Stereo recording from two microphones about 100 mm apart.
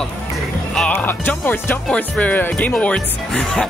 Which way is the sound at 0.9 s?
20° left (ahead or behind).